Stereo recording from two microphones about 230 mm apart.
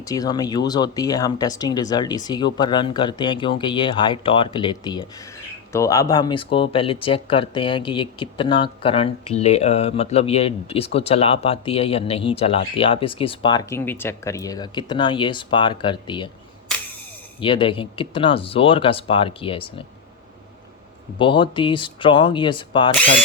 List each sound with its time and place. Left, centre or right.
0.0 s speech: centre
17.4 s speech: left
21.2 s speech: left
23.0 s speech: centre